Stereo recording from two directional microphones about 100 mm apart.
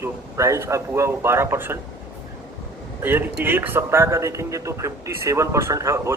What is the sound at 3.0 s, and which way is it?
A man's voice, 20° right (ahead or behind).